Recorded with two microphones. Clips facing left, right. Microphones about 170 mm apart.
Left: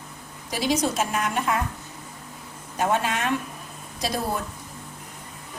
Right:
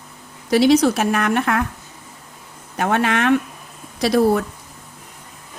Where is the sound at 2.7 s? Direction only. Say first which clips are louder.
Right 5 dB; 70° right (ahead or behind).